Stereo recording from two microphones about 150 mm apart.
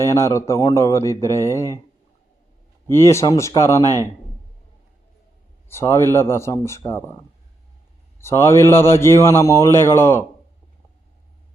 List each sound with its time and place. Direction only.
0.0 s speech: 20° left (ahead or behind)
2.9 s speech: 20° left (ahead or behind)
5.6 s a man's voice: 20° left (ahead or behind)
8.2 s a man's voice: 15° left (ahead or behind)